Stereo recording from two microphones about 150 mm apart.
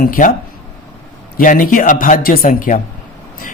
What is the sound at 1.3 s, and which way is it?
Speech, 65° left (ahead or behind).